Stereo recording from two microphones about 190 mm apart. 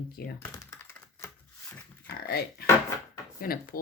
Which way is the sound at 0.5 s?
15° left (ahead or behind).